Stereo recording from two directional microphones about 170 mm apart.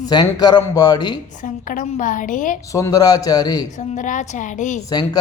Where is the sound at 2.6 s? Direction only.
20° left (ahead or behind).